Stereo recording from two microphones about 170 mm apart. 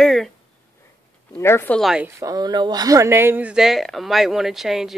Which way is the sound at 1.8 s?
5° right (ahead or behind).